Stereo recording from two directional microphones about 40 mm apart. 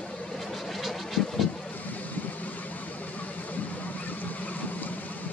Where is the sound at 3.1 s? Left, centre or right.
Left.